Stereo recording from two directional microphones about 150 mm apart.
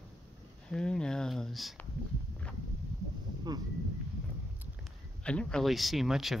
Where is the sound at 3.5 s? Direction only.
30° right (ahead or behind).